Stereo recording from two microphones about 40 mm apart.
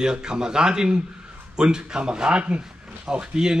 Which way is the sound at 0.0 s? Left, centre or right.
Centre.